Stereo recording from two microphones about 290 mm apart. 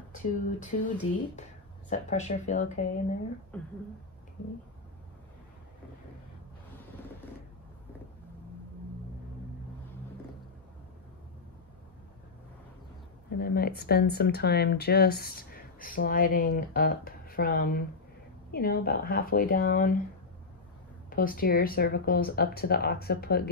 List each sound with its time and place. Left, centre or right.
0.1 s speech: left
3.5 s speech: centre
13.4 s speech: left
21.1 s speech: left